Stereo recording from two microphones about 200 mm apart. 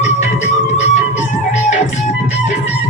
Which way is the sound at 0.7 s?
35° left (ahead or behind).